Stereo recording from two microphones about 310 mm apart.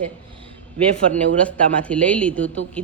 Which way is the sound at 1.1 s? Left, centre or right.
Centre.